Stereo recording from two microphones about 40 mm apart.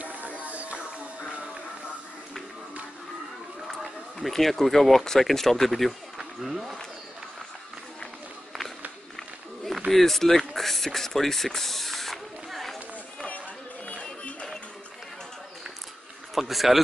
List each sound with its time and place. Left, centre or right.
0.0 s music: right
4.2 s speech: centre
9.8 s mechanisms: centre
13.8 s music: left
16.3 s speech: centre